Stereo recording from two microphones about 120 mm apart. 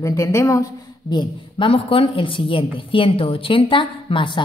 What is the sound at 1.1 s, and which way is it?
A woman's voice, 40° left (ahead or behind).